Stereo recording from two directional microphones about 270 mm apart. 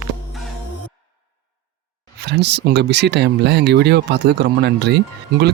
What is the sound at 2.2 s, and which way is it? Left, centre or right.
Speech, right.